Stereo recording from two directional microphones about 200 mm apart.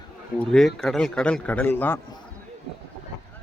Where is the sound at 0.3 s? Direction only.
5° left (ahead or behind).